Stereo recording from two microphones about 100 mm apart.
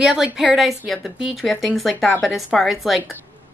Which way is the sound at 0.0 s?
5° right (ahead or behind).